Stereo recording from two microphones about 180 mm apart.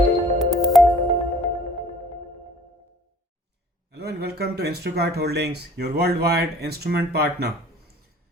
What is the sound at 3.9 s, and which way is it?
Speech, 65° right (ahead or behind).